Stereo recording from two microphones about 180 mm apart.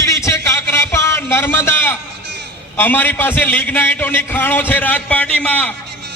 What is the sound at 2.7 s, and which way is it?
A man's voice, 10° left (ahead or behind).